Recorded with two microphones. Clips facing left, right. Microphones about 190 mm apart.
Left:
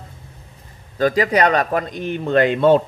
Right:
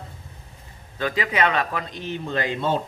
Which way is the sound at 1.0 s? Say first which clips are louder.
Left 7 dB; 40° left (ahead or behind).